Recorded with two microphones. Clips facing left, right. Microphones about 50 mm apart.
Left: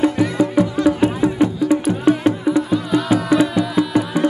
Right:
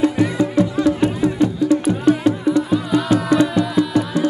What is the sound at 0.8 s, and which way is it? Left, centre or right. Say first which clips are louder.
Music: left 1 dB; centre.